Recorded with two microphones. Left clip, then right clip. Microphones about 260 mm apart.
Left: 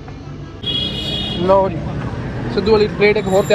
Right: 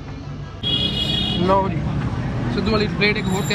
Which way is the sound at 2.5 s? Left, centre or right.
Centre.